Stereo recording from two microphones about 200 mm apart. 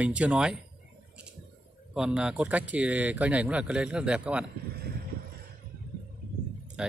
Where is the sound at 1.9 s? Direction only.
5° right (ahead or behind).